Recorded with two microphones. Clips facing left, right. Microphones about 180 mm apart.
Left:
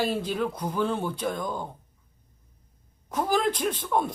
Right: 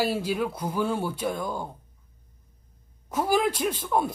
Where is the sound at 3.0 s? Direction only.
10° right (ahead or behind).